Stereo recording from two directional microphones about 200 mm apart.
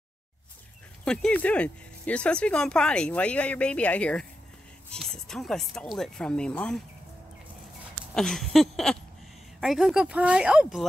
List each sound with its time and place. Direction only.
1.0 s speech: 5° left (ahead or behind)
8.1 s speech: 5° left (ahead or behind)